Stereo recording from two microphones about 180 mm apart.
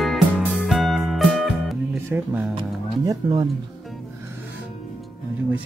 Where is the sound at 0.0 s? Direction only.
Centre (ahead or behind).